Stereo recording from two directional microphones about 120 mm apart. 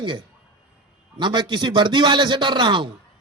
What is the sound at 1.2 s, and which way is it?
A man's voice, 40° right (ahead or behind).